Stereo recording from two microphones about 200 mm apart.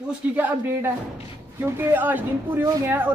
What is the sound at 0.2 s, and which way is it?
Speech, 10° right (ahead or behind).